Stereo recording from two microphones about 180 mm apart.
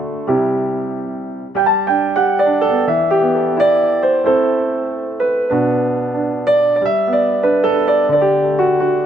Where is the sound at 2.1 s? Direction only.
Centre (ahead or behind).